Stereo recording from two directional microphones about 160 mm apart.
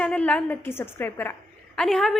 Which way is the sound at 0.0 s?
5° left (ahead or behind).